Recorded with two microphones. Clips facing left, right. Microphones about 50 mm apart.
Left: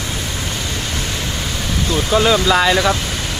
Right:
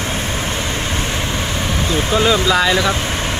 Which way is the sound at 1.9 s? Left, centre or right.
Right.